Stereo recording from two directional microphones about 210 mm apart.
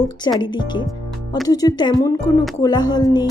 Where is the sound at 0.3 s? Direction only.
20° left (ahead or behind).